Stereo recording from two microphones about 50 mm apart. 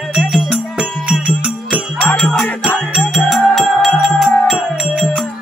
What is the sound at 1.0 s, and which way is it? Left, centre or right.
Music, right.